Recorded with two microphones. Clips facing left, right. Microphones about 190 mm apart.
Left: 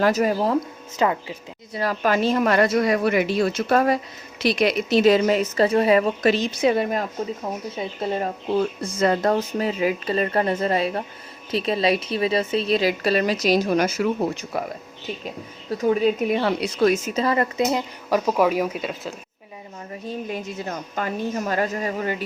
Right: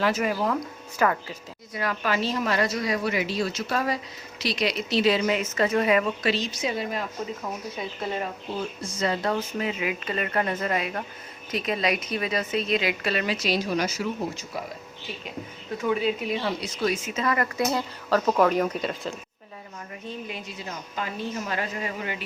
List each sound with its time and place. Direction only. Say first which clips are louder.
0.0 s a woman's voice: left 5 dB; 40° left (ahead or behind)
0.9 s a woman's voice: left 2 dB; 20° left (ahead or behind)
1.8 s speech: left 6 dB; 40° left (ahead or behind)
6.3 s a woman's voice: left 8 dB; 55° left (ahead or behind)
7.8 s a woman's voice: left 5 dB; 30° left (ahead or behind)
8.5 s a woman's voice: left 11 dB; 55° left (ahead or behind)
15.8 s speech: left 6 dB; 40° left (ahead or behind)
17.2 s speech: left 3 dB; 25° left (ahead or behind); by 19.1 s 5° left (ahead or behind)
20.1 s speech: left 7 dB; 45° left (ahead or behind)